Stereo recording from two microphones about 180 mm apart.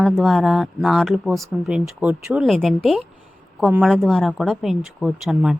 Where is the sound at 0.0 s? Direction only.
Centre (ahead or behind).